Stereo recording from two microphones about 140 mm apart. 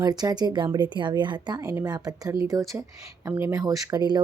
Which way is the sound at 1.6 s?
20° right (ahead or behind).